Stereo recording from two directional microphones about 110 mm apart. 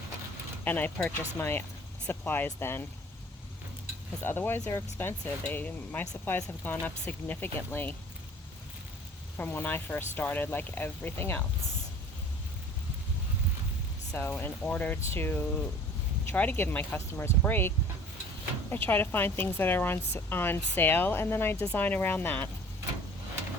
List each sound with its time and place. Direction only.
0.6 s speech: 15° left (ahead or behind)
4.2 s speech: 20° left (ahead or behind)
9.4 s speech: 20° left (ahead or behind)
14.1 s speech: 15° left (ahead or behind)